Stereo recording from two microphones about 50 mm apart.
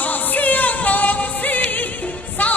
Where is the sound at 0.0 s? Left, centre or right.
Left.